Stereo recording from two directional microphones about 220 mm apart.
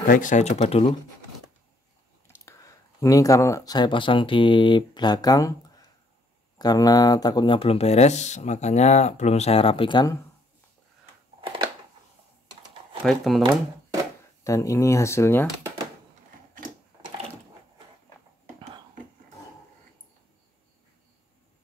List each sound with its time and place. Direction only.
0.1 s speech: 35° left (ahead or behind)
2.2 s speech: 15° left (ahead or behind)
6.6 s speech: 15° left (ahead or behind)
11.4 s a sound: 20° right (ahead or behind)
13.0 s speech: centre (ahead or behind)
13.4 s speech: 20° right (ahead or behind)
14.4 s speech: 15° left (ahead or behind)